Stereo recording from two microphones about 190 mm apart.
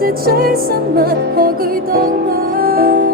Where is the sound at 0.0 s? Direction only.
55° right (ahead or behind).